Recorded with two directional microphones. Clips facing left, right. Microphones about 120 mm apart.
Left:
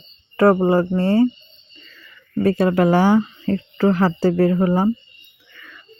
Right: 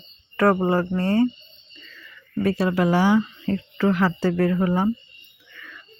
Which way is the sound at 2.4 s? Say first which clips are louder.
Left 5 dB; 45° left (ahead or behind).